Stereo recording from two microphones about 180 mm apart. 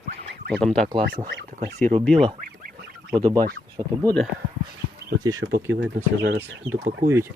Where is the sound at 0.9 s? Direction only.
25° right (ahead or behind).